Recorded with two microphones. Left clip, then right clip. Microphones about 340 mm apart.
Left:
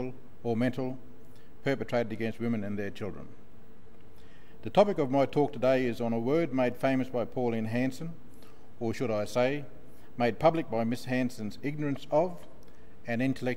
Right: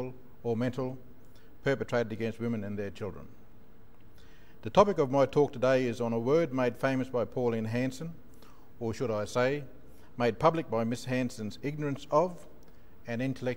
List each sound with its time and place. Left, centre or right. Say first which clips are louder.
0.0 s a man's voice: even; right
4.6 s a man's voice: right 1 dB; right